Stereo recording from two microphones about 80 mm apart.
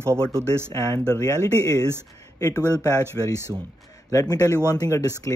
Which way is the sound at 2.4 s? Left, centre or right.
Left.